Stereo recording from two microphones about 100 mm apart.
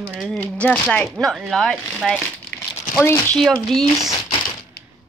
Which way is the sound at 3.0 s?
25° left (ahead or behind).